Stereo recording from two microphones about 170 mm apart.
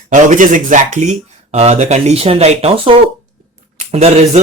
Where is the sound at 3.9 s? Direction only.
40° right (ahead or behind).